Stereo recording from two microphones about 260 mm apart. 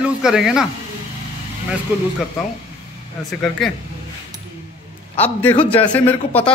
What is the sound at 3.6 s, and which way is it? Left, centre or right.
Speech, centre.